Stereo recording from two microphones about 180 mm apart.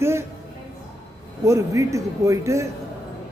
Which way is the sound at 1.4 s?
15° right (ahead or behind).